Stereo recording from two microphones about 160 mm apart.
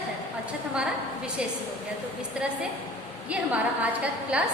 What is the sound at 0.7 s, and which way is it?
Speech, 5° right (ahead or behind).